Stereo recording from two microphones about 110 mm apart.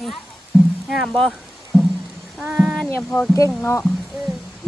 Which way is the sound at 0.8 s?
Centre (ahead or behind).